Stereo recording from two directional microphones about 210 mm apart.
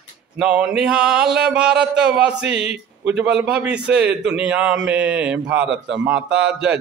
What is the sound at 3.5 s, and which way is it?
Mantra, 5° right (ahead or behind).